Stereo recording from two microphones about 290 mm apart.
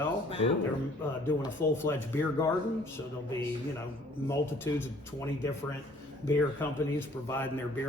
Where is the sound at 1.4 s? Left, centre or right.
Centre.